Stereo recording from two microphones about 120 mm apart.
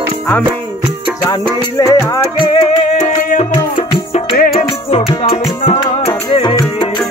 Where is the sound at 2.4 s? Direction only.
50° left (ahead or behind).